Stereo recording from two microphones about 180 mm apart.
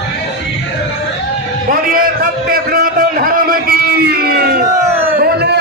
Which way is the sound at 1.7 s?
50° right (ahead or behind).